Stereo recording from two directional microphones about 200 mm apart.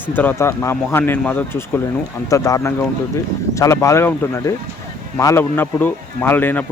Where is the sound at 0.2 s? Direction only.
10° left (ahead or behind).